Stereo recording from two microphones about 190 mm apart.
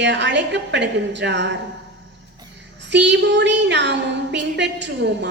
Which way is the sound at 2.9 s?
65° right (ahead or behind).